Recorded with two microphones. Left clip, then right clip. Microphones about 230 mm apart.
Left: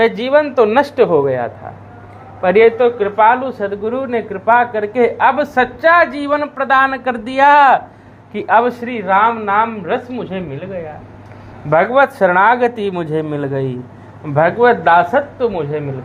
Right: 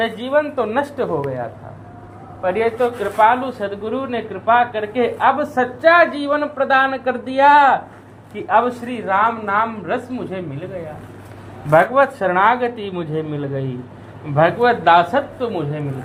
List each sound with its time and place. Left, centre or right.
0.0 s speech: left
11.7 s speech: left
14.3 s speech: left